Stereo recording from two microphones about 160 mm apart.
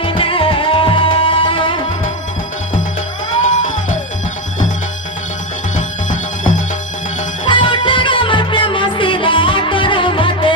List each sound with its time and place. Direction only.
0.0 s music: 35° left (ahead or behind)
3.5 s music: 50° left (ahead or behind)
5.7 s music: 50° left (ahead or behind)
7.4 s music: 30° left (ahead or behind)